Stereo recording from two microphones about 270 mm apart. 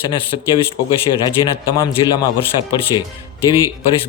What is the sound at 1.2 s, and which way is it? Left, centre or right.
Speech, centre.